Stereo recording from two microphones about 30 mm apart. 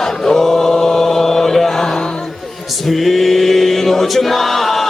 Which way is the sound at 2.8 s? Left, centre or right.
Centre.